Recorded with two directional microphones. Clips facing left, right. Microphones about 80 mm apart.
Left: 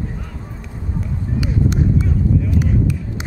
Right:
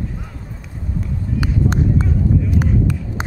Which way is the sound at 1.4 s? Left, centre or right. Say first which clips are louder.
Even; right.